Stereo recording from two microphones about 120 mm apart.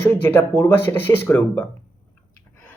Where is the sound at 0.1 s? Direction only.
15° left (ahead or behind).